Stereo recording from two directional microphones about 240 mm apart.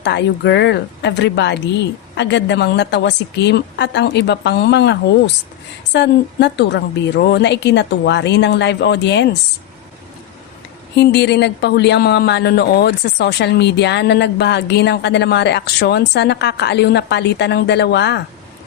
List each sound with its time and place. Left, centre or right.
0.0 s speech: left
10.9 s speech: left